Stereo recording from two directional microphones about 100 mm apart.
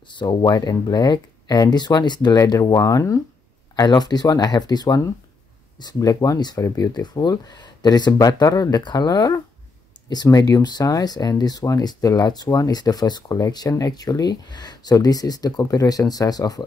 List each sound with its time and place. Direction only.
0.2 s speech: 50° left (ahead or behind)